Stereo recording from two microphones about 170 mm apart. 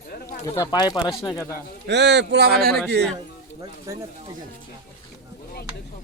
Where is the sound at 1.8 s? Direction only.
90° right; by 2.7 s 65° right (ahead or behind).